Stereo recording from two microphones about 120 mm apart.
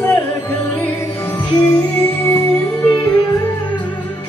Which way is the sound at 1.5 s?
25° left (ahead or behind).